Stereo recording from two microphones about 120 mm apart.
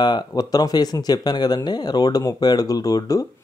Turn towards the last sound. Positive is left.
turn(degrees=30)  # may be behind; listen again after turning